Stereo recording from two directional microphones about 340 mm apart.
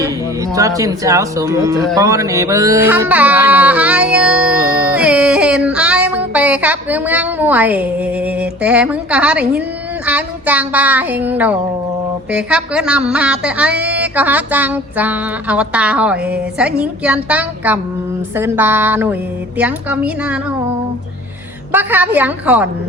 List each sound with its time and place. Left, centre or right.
0.0 s speech: centre
2.0 s music: centre
18.3 s speech: centre
19.5 s music: centre
21.7 s music: centre